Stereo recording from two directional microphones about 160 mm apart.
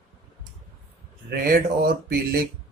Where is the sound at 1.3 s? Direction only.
70° right (ahead or behind).